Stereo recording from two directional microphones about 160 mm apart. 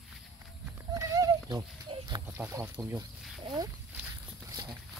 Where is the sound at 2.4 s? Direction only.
10° right (ahead or behind).